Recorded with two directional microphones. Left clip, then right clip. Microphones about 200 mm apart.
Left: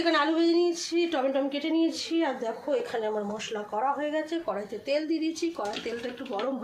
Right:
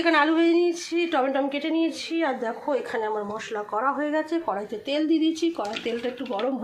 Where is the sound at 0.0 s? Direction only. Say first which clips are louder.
Right 4 dB; 15° right (ahead or behind).